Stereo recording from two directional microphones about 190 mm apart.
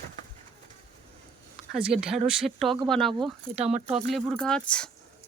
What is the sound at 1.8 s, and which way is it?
Speech, 5° right (ahead or behind).